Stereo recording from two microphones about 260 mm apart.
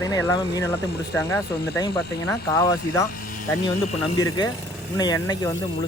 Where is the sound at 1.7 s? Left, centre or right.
Centre.